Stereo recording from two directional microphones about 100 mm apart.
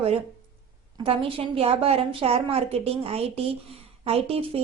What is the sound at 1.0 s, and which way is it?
A woman's voice, 65° right (ahead or behind).